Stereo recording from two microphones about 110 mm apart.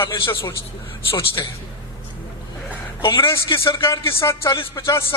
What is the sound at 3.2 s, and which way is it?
A man's voice, 25° left (ahead or behind).